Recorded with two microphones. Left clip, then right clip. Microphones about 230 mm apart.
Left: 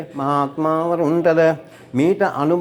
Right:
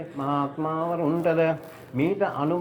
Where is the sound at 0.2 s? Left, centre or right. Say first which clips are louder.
Left 8 dB; left.